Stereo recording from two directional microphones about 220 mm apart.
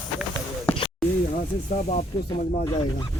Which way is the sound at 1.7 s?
35° left (ahead or behind).